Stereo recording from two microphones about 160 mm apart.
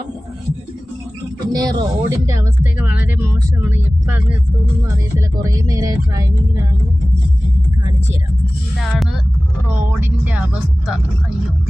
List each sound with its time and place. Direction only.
1.5 s speech: 25° right (ahead or behind)
5.1 s speech: 20° right (ahead or behind)
8.8 s speech: centre (ahead or behind)